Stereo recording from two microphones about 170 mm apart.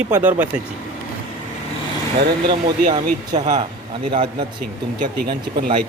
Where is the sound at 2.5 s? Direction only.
30° right (ahead or behind).